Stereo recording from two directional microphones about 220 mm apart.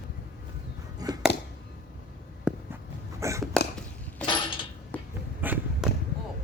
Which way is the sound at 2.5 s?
5° right (ahead or behind).